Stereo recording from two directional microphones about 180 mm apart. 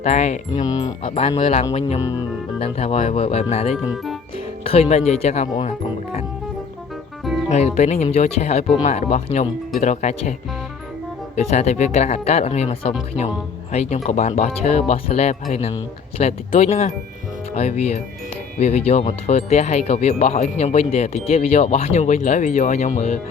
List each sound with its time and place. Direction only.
0.0 s speech: 40° left (ahead or behind)
0.6 s speech: 20° left (ahead or behind)
1.3 s speech: 35° left (ahead or behind)
2.0 s speech: 20° left (ahead or behind)
2.6 s speech: 35° left (ahead or behind)
3.8 s speech: centre (ahead or behind)
4.6 s speech: 35° left (ahead or behind)
7.5 s speech: 40° left (ahead or behind)
11.3 s speech: 40° left (ahead or behind)
14.0 s speech: 40° left (ahead or behind)